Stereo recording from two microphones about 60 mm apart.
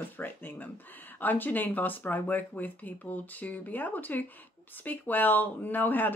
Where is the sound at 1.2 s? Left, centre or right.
Left.